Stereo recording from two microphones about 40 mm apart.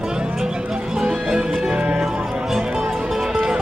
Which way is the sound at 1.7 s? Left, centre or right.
Right.